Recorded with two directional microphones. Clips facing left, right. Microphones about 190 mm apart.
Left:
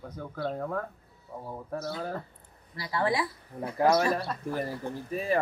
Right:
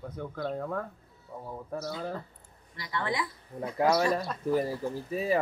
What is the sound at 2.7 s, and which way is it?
Speech, 30° left (ahead or behind).